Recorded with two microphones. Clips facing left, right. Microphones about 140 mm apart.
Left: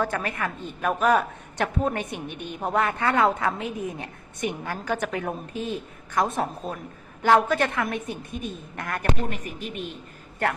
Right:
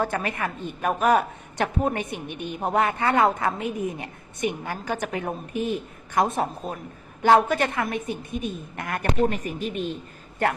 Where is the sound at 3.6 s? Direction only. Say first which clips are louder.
Right 3 dB; 60° right (ahead or behind).